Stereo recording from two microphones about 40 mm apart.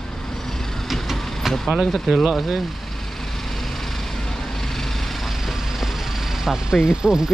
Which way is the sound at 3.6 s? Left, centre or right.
Centre.